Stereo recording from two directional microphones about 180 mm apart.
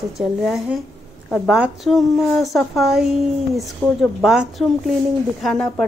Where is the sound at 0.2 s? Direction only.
Centre (ahead or behind).